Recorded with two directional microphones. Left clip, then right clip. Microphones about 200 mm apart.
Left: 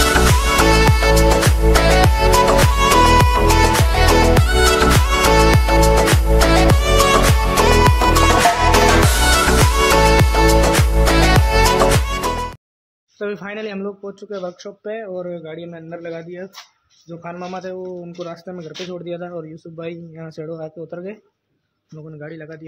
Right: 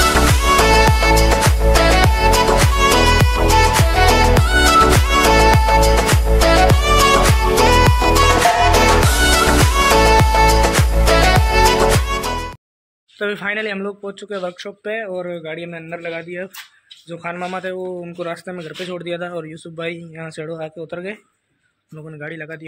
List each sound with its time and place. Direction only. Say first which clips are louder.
0.0 s music: right 1 dB; centre (ahead or behind)
13.2 s a man's voice: right 5 dB; centre (ahead or behind)
22.2 s a man's voice: right 4 dB; 5° right (ahead or behind)